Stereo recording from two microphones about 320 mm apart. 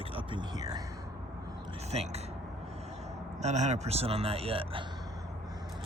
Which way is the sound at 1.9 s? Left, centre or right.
Centre.